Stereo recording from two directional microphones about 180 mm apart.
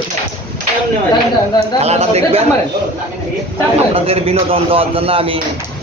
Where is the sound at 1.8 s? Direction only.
35° right (ahead or behind).